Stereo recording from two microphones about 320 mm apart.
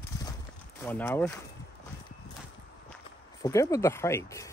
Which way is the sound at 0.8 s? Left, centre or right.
Centre.